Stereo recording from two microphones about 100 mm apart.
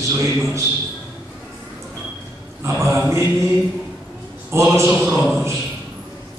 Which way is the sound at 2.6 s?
30° right (ahead or behind).